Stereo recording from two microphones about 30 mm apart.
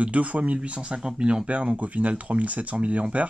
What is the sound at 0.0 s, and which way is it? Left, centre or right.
Speech, right.